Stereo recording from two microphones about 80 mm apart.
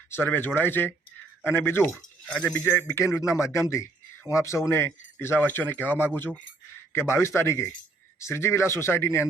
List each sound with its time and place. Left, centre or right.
0.2 s speech: left
2.3 s speech: centre
2.7 s speech: left
6.9 s speech: left